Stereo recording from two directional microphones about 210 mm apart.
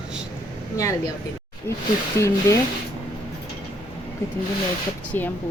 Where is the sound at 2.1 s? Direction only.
15° left (ahead or behind).